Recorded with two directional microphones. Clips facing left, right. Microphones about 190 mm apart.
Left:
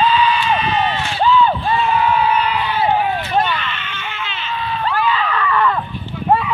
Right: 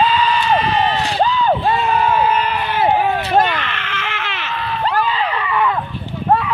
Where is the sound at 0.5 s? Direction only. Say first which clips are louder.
Right 2 dB; 35° right (ahead or behind).